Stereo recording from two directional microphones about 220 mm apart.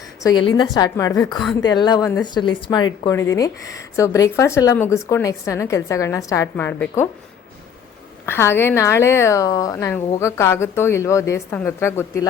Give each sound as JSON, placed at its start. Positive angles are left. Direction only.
{"t": 0.2, "sound": "a woman's voice", "side_deg": 15}
{"t": 8.3, "sound": "a woman's voice", "side_deg": 10}